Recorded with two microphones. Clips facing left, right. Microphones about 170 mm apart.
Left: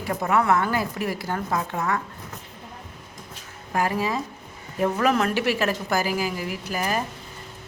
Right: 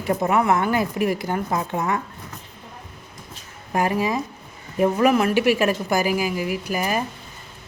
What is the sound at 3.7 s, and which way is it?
A woman's voice, 15° right (ahead or behind).